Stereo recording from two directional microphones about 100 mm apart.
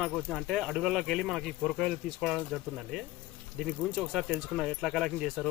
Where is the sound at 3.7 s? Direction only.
Centre (ahead or behind).